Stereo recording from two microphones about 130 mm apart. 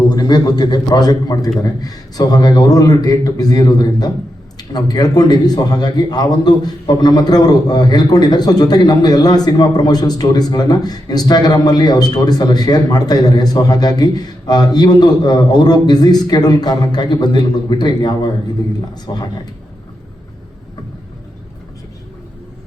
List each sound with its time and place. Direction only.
0.1 s a man's voice: 35° left (ahead or behind)